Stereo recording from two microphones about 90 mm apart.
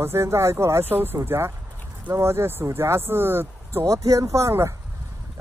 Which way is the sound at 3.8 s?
35° right (ahead or behind).